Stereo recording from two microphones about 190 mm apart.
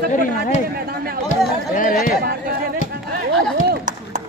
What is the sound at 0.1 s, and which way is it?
Speech, 45° left (ahead or behind).